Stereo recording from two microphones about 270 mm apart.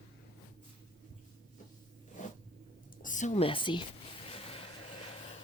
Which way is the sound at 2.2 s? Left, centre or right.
Left.